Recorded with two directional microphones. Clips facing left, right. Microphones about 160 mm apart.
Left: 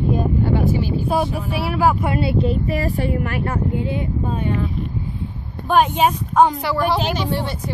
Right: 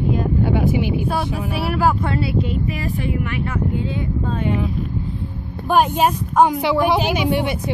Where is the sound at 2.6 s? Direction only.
40° left (ahead or behind).